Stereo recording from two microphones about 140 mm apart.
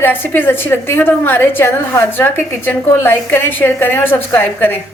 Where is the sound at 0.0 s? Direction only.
15° left (ahead or behind).